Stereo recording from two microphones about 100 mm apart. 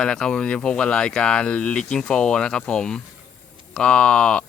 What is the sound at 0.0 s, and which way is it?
Speech, 5° left (ahead or behind).